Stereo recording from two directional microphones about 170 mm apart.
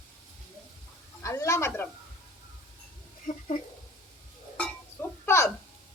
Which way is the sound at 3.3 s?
50° left (ahead or behind).